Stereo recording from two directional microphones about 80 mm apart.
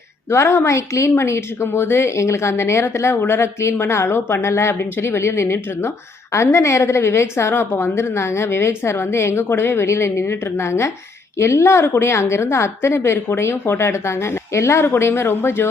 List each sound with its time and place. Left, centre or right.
0.3 s speech: left